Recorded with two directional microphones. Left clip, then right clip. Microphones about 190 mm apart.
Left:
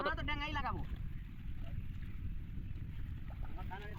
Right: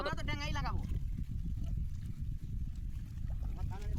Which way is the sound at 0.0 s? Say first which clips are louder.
Left 1 dB; 10° right (ahead or behind).